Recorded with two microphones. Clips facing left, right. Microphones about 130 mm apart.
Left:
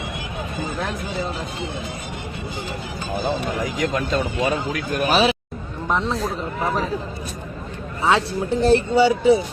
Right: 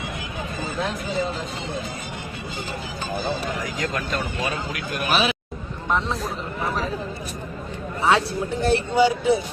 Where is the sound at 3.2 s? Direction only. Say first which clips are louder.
Left 6 dB; 15° left (ahead or behind).